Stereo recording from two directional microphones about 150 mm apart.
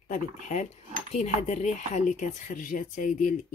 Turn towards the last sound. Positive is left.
turn(degrees=60)  # may be behind; listen again after turning